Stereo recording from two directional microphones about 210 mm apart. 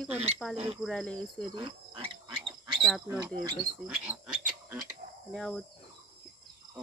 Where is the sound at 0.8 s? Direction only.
5° left (ahead or behind).